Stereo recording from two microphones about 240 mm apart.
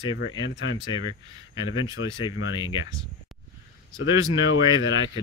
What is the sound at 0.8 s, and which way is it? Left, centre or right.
Speech, centre.